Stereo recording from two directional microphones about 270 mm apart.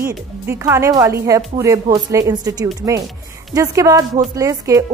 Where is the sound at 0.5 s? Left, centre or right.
Centre.